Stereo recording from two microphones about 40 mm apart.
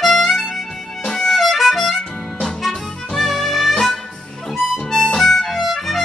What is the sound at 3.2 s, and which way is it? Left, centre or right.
Music, centre.